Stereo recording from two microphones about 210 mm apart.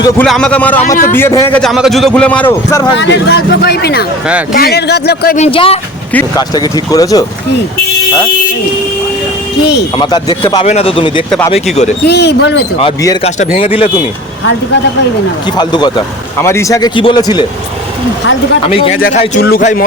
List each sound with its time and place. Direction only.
0.2 s a man's voice: 5° left (ahead or behind)
3.0 s speech: 55° left (ahead or behind)
5.4 s a man's voice: 25° left (ahead or behind)
10.0 s speech: 20° left (ahead or behind)
10.6 s speech: 30° left (ahead or behind)
11.3 s a man's voice: 5° left (ahead or behind)
12.0 s speech: 55° left (ahead or behind)
12.8 s a man's voice: 15° left (ahead or behind)
13.2 s speech: 30° left (ahead or behind)
15.5 s a man's voice: 20° left (ahead or behind)
19.4 s speech: 45° left (ahead or behind)